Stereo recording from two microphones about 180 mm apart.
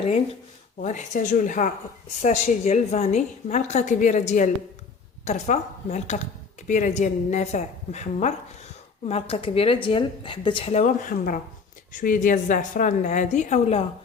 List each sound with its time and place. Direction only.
0.8 s a woman's voice: 40° left (ahead or behind)